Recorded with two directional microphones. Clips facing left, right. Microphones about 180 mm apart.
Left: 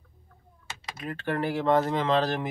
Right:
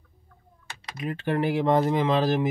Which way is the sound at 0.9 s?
15° right (ahead or behind).